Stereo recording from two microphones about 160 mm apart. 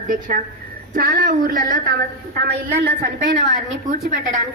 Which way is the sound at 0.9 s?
65° right (ahead or behind).